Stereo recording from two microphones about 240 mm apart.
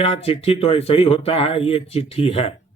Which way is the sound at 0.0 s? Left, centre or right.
Left.